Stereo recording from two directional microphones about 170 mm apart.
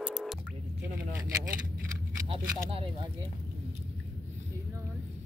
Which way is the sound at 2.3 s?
35° right (ahead or behind).